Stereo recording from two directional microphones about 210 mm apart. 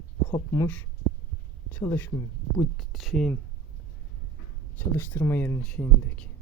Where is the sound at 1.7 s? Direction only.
10° left (ahead or behind).